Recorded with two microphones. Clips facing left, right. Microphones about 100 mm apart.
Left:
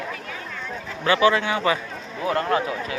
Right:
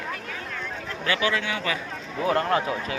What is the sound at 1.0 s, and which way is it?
Speech, 30° left (ahead or behind).